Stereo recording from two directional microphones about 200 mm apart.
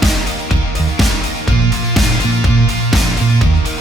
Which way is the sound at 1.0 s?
Centre (ahead or behind).